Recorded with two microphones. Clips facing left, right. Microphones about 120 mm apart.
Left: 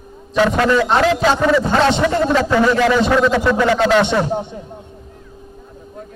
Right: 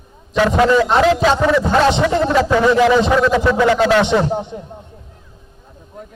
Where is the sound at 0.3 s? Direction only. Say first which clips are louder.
Right 1 dB; 5° right (ahead or behind).